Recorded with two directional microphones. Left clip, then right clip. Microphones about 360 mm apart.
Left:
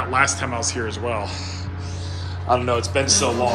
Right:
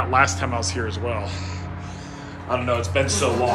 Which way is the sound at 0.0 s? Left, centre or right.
Centre.